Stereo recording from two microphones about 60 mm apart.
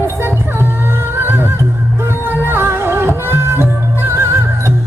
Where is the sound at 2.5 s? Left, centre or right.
Right.